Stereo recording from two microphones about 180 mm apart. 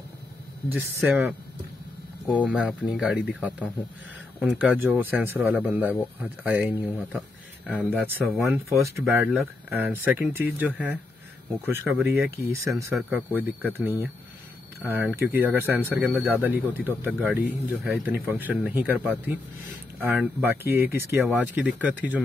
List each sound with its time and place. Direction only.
0.7 s speech: 10° right (ahead or behind)
8.5 s speech: 15° right (ahead or behind)
16.1 s speech: 5° left (ahead or behind)
16.3 s speech: 10° right (ahead or behind)